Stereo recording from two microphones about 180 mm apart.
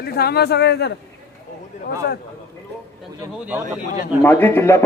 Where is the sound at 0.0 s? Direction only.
60° left (ahead or behind).